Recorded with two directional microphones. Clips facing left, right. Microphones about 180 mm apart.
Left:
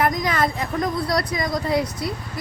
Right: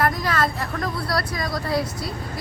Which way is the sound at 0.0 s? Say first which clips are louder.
Left 1 dB; 15° left (ahead or behind).